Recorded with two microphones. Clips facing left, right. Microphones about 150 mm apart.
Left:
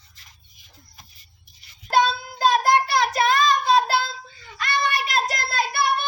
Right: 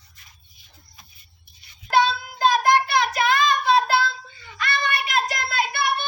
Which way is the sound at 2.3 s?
35° left (ahead or behind).